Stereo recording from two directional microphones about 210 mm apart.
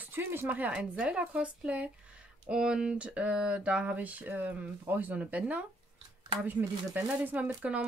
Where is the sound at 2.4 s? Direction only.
5° right (ahead or behind).